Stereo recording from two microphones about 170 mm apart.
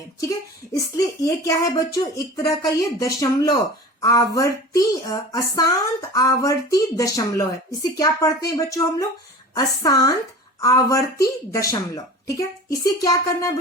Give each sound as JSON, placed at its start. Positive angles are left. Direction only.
{"t": 0.2, "sound": "speech", "side_deg": 20}